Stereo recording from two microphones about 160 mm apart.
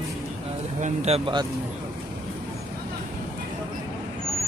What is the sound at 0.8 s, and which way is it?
Speech, 40° right (ahead or behind).